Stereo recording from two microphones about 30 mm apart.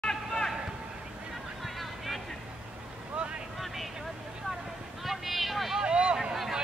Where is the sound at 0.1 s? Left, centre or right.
Centre.